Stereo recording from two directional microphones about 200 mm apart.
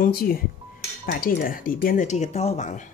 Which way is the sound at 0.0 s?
50° left (ahead or behind).